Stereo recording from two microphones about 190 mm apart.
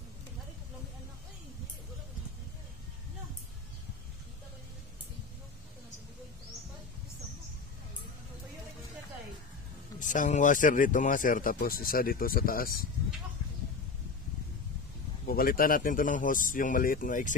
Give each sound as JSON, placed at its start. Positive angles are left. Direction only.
{"t": 9.9, "sound": "speech", "side_deg": 45}
{"t": 15.2, "sound": "speech", "side_deg": 50}